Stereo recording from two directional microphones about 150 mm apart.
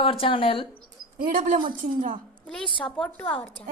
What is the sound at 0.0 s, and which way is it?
Speech, 40° left (ahead or behind).